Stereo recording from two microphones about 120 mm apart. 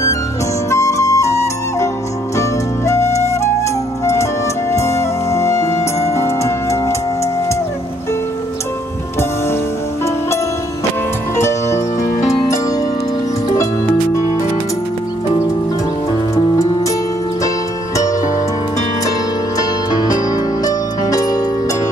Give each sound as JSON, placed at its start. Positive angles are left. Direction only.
{"t": 0.7, "sound": "flute", "side_deg": 25}
{"t": 2.9, "sound": "flute", "side_deg": 25}
{"t": 4.0, "sound": "music", "side_deg": 25}
{"t": 11.3, "sound": "music", "side_deg": 20}
{"t": 19.9, "sound": "music", "side_deg": 35}